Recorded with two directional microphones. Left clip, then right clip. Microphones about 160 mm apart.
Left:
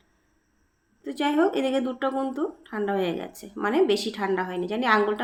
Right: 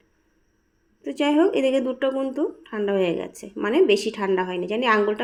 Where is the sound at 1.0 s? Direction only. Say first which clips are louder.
Right 3 dB; 15° right (ahead or behind).